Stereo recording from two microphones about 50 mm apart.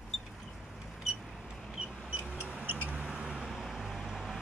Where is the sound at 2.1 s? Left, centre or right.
Centre.